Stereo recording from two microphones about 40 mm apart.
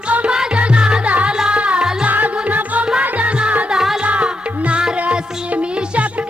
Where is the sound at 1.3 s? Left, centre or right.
Centre.